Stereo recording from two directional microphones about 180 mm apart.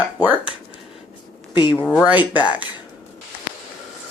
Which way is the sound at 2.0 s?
10° right (ahead or behind).